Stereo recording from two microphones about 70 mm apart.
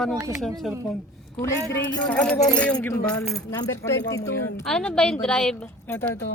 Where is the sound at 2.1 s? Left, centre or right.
Centre.